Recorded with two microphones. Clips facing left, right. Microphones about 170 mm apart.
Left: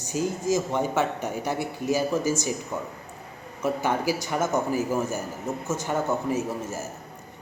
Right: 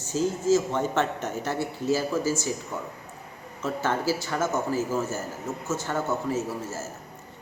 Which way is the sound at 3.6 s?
15° left (ahead or behind).